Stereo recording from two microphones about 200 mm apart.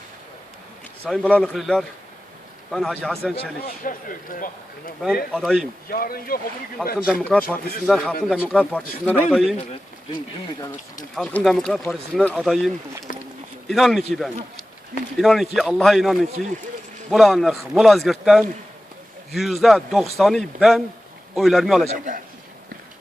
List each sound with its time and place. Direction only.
1.0 s a man's voice: 5° left (ahead or behind)
3.6 s speech: 45° left (ahead or behind)
5.3 s a man's voice: centre (ahead or behind)
5.9 s speech: 45° left (ahead or behind)
7.1 s a man's voice: 5° left (ahead or behind)
11.1 s a man's voice: centre (ahead or behind)
13.1 s a sound: 45° left (ahead or behind)
13.7 s a man's voice: centre (ahead or behind)
21.8 s a man's voice: 40° right (ahead or behind)